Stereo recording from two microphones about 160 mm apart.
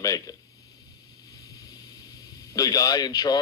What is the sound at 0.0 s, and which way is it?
Speech, 25° left (ahead or behind).